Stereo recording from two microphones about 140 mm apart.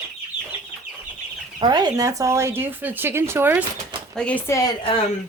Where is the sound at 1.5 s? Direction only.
30° right (ahead or behind); by 3.6 s 15° right (ahead or behind).